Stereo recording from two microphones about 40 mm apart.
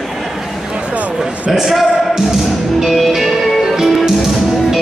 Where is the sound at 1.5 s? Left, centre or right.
Centre.